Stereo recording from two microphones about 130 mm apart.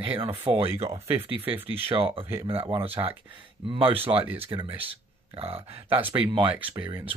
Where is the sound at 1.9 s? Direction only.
45° right (ahead or behind).